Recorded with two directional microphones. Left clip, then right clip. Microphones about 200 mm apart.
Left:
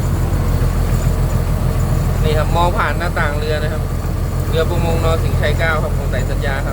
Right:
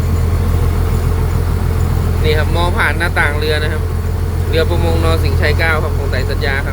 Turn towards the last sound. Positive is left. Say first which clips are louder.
# right 3 dB
turn(degrees=-5)  # may be behind; listen again after turning